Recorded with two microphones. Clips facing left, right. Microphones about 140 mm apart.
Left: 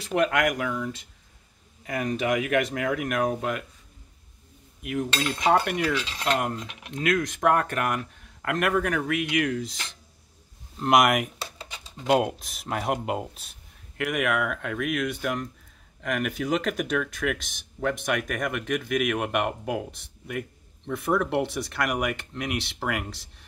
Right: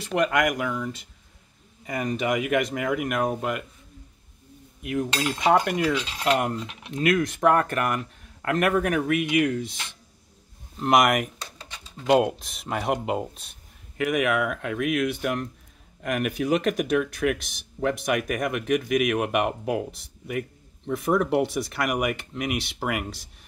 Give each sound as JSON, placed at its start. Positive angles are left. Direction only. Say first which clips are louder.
{"t": 0.0, "sound": "speech", "louder": "right 1 dB", "side_deg": 0}
{"t": 5.1, "sound": "cutlery", "louder": "right 1 dB", "side_deg": -15}
{"t": 5.6, "sound": "speech", "louder": "right 2 dB", "side_deg": -15}